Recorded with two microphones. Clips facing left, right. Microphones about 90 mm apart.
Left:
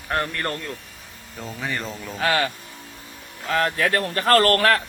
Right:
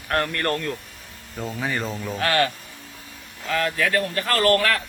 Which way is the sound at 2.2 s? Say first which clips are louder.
Even; 10° left (ahead or behind).